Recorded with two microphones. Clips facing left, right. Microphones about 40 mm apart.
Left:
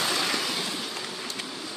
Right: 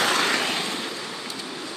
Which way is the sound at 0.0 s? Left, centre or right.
Right.